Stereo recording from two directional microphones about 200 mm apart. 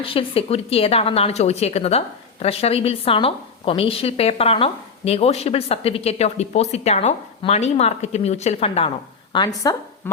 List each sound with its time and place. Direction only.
0.0 s a woman's voice: 25° left (ahead or behind)